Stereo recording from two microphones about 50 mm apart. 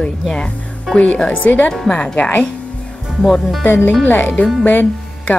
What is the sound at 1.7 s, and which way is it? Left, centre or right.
Speech, centre.